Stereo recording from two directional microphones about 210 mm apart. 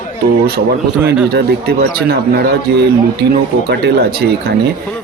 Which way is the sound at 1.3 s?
50° right (ahead or behind).